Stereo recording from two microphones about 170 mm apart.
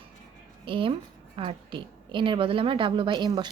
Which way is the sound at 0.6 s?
30° right (ahead or behind).